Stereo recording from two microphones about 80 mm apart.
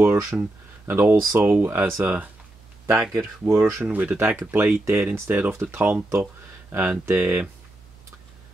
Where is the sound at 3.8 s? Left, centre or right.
Right.